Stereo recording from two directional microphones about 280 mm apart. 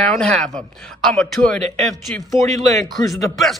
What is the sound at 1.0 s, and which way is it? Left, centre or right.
Speech, centre.